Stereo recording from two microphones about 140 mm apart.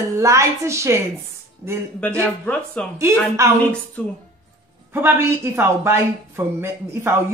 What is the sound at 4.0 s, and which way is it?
Speech, 10° left (ahead or behind).